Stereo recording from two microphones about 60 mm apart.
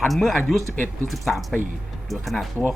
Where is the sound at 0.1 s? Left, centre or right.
Centre.